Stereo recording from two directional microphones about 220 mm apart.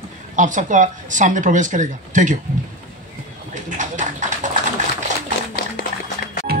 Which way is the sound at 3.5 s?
35° right (ahead or behind).